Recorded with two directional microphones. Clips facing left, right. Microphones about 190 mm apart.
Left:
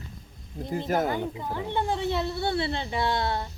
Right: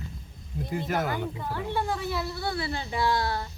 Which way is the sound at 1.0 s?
20° left (ahead or behind).